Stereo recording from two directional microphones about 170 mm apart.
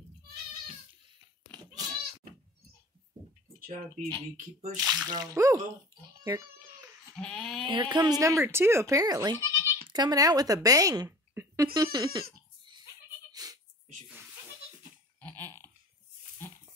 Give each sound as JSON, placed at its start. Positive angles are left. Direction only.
{"t": 3.5, "sound": "speech", "side_deg": -55}
{"t": 4.7, "sound": "speech", "side_deg": -5}
{"t": 5.0, "sound": "speech", "side_deg": -25}
{"t": 7.2, "sound": "speech", "side_deg": 5}
{"t": 7.6, "sound": "a woman's voice", "side_deg": -30}
{"t": 13.3, "sound": "music", "side_deg": -20}
{"t": 15.1, "sound": "a sound", "side_deg": 10}